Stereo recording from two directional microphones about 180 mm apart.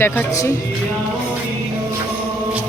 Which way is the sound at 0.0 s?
15° left (ahead or behind).